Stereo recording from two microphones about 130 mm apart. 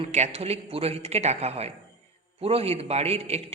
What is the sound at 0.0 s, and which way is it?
A woman's voice, 55° right (ahead or behind).